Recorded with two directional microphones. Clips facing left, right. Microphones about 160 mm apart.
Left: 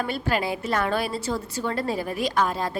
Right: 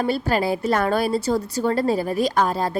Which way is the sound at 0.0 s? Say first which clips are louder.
Right 5 dB; 35° right (ahead or behind).